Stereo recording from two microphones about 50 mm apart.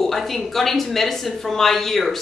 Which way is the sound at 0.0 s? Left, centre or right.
Centre.